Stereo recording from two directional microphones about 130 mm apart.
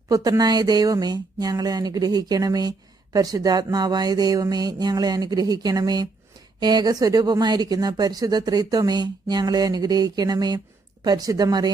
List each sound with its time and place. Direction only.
0.1 s speech: 30° right (ahead or behind)